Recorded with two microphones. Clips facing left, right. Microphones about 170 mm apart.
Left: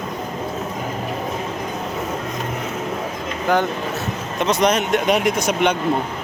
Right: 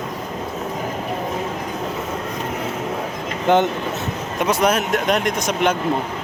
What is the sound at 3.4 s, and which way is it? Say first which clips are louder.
Speech: right 3 dB; 20° right (ahead or behind).